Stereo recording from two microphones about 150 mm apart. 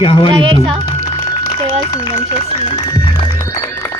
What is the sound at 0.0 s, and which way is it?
Speech, 35° left (ahead or behind).